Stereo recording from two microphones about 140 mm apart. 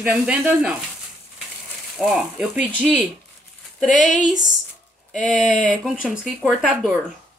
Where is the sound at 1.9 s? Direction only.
5° right (ahead or behind).